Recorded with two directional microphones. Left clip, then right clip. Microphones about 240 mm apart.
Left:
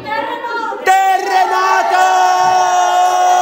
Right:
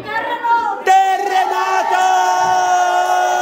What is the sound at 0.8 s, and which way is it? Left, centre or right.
Crowd, centre.